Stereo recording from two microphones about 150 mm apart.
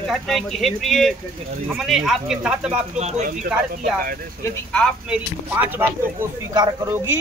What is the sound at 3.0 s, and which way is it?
Speech, 50° right (ahead or behind).